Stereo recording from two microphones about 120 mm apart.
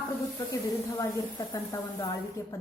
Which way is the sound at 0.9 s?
30° left (ahead or behind).